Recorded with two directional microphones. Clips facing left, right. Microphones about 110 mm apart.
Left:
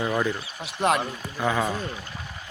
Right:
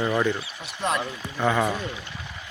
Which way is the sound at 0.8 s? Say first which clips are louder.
Left 4 dB; 60° left (ahead or behind).